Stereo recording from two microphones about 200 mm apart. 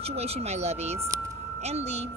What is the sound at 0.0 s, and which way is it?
Speech, 30° right (ahead or behind).